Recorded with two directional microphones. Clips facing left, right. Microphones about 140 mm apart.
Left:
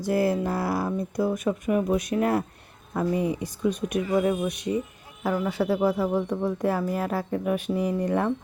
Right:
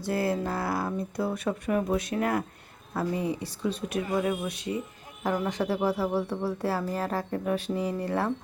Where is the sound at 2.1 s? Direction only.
25° left (ahead or behind).